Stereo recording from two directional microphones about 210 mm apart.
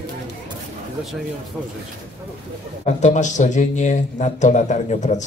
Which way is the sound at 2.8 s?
35° left (ahead or behind).